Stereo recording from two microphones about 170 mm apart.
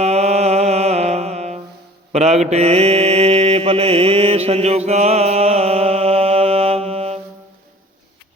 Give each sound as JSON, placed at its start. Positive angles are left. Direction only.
{"t": 0.0, "sound": "music", "side_deg": -40}
{"t": 2.1, "sound": "mantra", "side_deg": -40}